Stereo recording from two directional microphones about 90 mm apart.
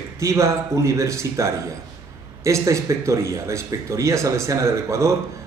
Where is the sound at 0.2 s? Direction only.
35° right (ahead or behind).